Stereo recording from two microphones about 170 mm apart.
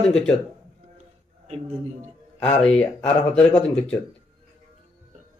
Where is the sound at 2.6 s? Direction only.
5° left (ahead or behind).